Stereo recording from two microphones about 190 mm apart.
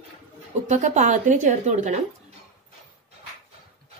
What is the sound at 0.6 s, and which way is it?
A woman's voice, 40° right (ahead or behind).